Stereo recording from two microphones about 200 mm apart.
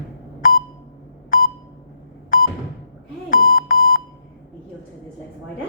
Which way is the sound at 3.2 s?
45° left (ahead or behind).